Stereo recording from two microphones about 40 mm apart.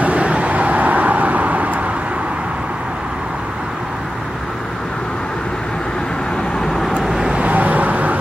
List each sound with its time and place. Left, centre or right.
0.0 s vehicle: right
7.0 s vehicle: centre
7.3 s vehicle: right